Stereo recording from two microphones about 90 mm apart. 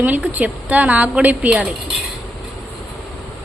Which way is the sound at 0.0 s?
20° right (ahead or behind).